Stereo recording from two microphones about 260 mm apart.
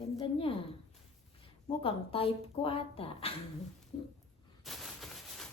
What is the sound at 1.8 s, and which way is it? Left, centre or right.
Speech, left.